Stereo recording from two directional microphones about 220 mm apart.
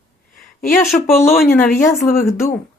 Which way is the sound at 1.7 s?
40° left (ahead or behind).